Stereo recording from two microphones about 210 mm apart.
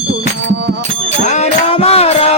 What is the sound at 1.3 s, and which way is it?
Music, 30° left (ahead or behind).